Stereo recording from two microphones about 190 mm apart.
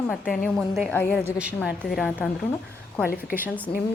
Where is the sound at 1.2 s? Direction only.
5° right (ahead or behind).